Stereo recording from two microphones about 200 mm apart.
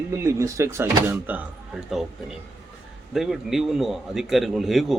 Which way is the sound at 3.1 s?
Centre (ahead or behind).